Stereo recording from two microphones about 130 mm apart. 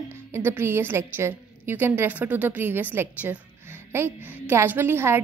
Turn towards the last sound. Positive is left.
turn(degrees=-15)  # may be behind; listen again after turning